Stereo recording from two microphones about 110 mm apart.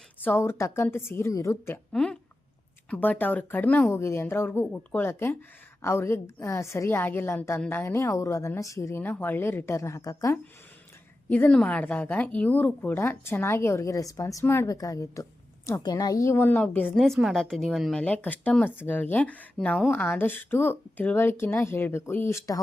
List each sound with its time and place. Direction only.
0.2 s a woman's voice: 20° left (ahead or behind)
1.9 s a woman's voice: 5° left (ahead or behind); by 10.3 s 30° left (ahead or behind)
11.3 s a woman's voice: 15° left (ahead or behind)
16.9 s a woman's voice: centre (ahead or behind)
18.0 s a woman's voice: 15° left (ahead or behind)